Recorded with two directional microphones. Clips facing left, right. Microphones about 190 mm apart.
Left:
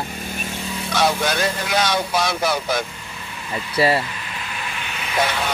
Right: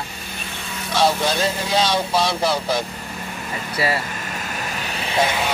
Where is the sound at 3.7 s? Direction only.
25° left (ahead or behind).